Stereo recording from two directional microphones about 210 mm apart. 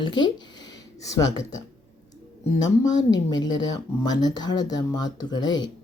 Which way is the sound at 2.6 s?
15° left (ahead or behind).